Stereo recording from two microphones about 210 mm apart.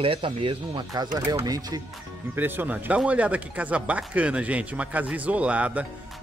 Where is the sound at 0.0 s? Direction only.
25° right (ahead or behind).